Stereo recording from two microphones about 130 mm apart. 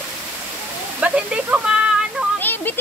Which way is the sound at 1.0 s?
10° right (ahead or behind).